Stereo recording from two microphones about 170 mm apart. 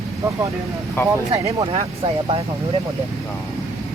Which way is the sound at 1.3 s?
35° right (ahead or behind).